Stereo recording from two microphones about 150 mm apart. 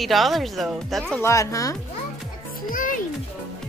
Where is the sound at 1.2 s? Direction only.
20° left (ahead or behind).